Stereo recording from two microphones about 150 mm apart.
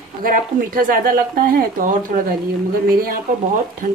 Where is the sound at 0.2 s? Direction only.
70° right (ahead or behind).